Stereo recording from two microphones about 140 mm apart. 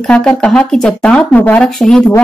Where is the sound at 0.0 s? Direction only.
5° left (ahead or behind).